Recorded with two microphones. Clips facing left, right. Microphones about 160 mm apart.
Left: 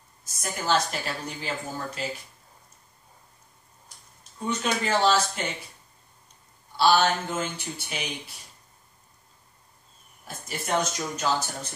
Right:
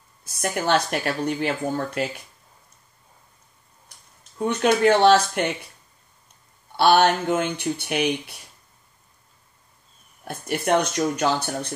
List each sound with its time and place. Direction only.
0.4 s a woman's voice: 70° right (ahead or behind)
4.4 s a woman's voice: 60° right (ahead or behind)
6.8 s a woman's voice: 60° right (ahead or behind)
10.2 s a woman's voice: 60° right (ahead or behind)